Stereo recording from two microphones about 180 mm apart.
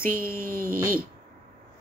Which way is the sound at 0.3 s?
50° right (ahead or behind).